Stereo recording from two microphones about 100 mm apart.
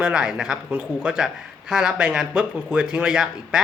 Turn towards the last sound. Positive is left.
turn(degrees=-5)  # may be behind; listen again after turning